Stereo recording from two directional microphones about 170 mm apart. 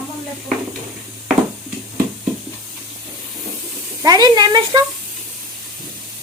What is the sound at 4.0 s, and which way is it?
Speech, 25° right (ahead or behind).